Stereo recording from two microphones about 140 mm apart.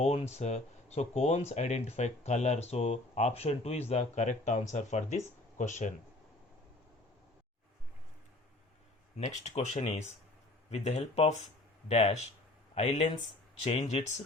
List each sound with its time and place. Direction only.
0.0 s speech: 50° left (ahead or behind)
9.1 s speech: 55° left (ahead or behind)